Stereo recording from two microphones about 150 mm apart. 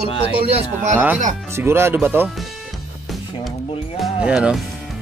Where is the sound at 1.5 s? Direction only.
15° right (ahead or behind).